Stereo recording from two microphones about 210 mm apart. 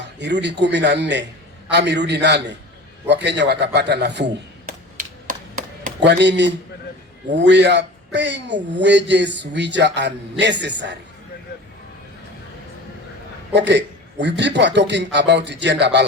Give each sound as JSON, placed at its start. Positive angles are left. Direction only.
{"t": 0.2, "sound": "speech", "side_deg": -55}
{"t": 5.3, "sound": "chop", "side_deg": -40}
{"t": 6.0, "sound": "speech", "side_deg": -55}
{"t": 13.5, "sound": "speech", "side_deg": -55}